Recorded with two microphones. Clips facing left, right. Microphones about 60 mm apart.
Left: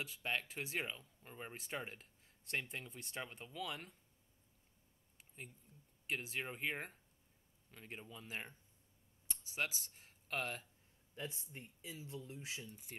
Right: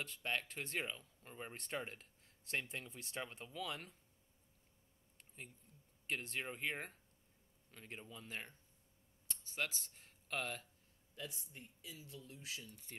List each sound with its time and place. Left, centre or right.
0.0 s speech: centre
5.1 s a sound: centre
6.0 s speech: centre
11.1 s speech: left